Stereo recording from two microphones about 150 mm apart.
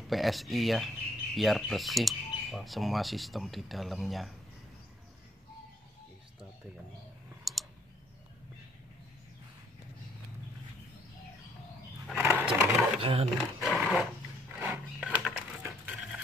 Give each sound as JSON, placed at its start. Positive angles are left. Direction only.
{"t": 0.1, "sound": "speech", "side_deg": 0}
{"t": 7.5, "sound": "clicking", "side_deg": 0}
{"t": 12.2, "sound": "a sound", "side_deg": -20}
{"t": 13.0, "sound": "speech", "side_deg": -40}
{"t": 13.6, "sound": "dog", "side_deg": -5}
{"t": 14.6, "sound": "a sound", "side_deg": -10}
{"t": 15.6, "sound": "printer", "side_deg": -10}